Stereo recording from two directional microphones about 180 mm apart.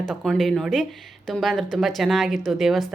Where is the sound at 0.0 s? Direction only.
5° left (ahead or behind).